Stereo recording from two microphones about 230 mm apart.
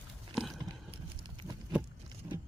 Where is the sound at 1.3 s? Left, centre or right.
Centre.